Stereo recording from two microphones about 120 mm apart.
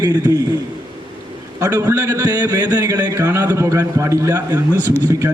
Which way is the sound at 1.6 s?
20° right (ahead or behind).